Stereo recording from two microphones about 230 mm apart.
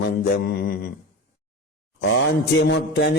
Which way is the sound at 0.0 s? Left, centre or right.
Left.